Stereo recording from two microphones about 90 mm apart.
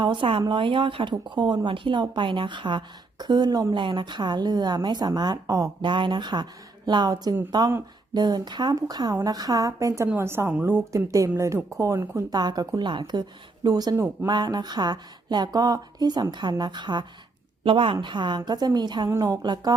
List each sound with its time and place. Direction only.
0.0 s speech: 65° right (ahead or behind); by 5.7 s 40° right (ahead or behind)
5.8 s a woman's voice: 60° right (ahead or behind); by 10.8 s 25° right (ahead or behind)
10.9 s a woman's voice: 35° right (ahead or behind)
13.9 s a woman's voice: 30° right (ahead or behind)
14.3 s speech: 50° right (ahead or behind)
17.6 s a woman's voice: 75° right (ahead or behind)
18.0 s speech: 60° right (ahead or behind)